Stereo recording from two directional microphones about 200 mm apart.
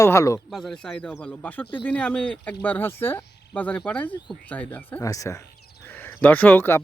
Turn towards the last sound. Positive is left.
turn(degrees=10)  # may be behind; listen again after turning